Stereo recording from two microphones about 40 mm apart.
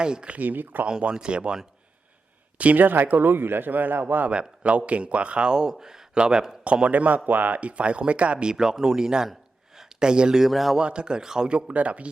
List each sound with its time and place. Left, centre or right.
0.0 s speech: right
0.3 s a man's voice: right
0.9 s speech: right
2.6 s a man's voice: right
4.3 s speech: right
6.8 s speech: right
8.4 s speech: centre
9.3 s gasp: centre
10.4 s speech: centre
10.8 s speech: right
11.7 s speech: right